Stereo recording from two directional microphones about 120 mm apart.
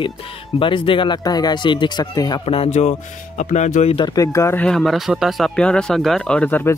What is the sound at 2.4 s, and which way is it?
Speech, 55° left (ahead or behind).